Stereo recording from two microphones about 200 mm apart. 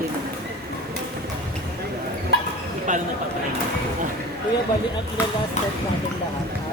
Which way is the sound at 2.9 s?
40° right (ahead or behind).